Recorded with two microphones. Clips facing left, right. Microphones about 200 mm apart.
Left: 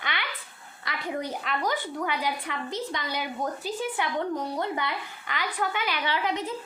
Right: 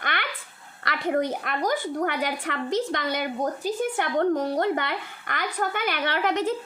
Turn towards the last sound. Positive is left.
turn(degrees=-75)  # may be behind; listen again after turning